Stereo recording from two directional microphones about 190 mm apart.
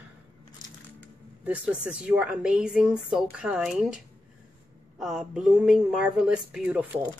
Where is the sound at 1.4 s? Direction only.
5° right (ahead or behind).